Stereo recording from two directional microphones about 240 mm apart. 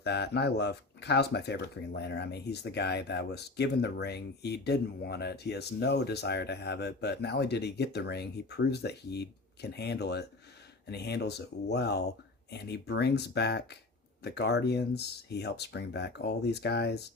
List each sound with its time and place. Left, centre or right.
0.0 s speech: left